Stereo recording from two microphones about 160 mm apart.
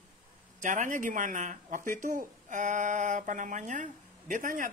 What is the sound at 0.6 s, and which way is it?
Speech, 50° right (ahead or behind).